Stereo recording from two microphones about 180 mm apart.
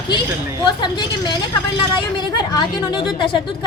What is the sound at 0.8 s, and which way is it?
A woman's voice, 25° left (ahead or behind).